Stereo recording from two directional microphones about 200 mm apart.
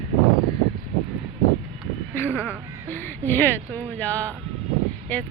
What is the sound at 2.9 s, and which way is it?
Speech, 10° left (ahead or behind).